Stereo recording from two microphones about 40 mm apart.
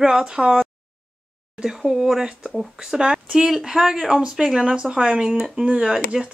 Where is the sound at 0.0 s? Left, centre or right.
Centre.